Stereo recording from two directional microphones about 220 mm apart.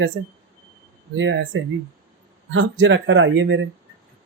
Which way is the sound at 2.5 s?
60° right (ahead or behind).